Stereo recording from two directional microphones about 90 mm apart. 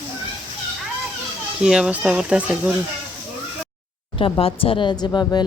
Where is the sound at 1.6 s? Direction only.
10° right (ahead or behind).